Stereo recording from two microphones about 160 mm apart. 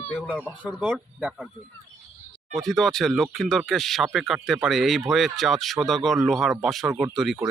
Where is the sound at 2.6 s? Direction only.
Centre (ahead or behind).